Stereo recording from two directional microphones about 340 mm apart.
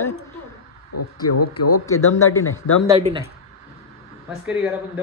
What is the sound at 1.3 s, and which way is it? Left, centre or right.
Speech, left.